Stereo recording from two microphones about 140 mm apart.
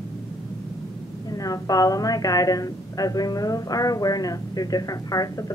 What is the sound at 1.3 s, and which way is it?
A woman's voice, 25° left (ahead or behind).